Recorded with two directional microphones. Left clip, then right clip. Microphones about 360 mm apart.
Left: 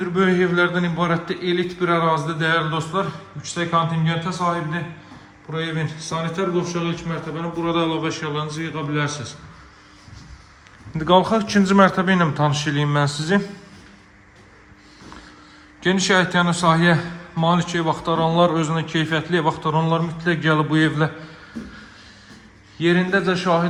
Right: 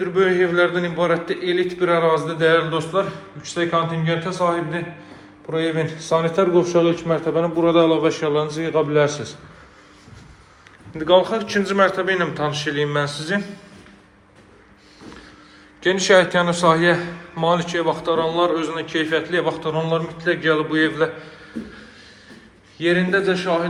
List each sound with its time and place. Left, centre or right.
0.0 s a man's voice: centre
10.9 s a man's voice: centre
15.8 s a man's voice: centre
22.8 s a man's voice: centre